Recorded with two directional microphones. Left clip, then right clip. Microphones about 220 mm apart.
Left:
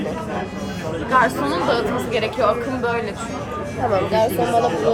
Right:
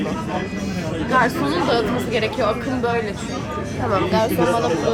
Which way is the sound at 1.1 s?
15° left (ahead or behind).